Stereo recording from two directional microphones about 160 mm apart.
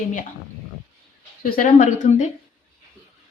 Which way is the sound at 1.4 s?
60° left (ahead or behind).